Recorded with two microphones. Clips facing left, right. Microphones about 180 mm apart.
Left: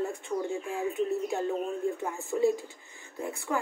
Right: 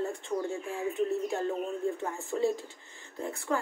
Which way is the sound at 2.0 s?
10° left (ahead or behind).